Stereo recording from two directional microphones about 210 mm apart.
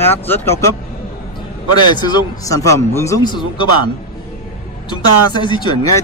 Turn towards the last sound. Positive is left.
turn(degrees=20)  # may be behind; listen again after turning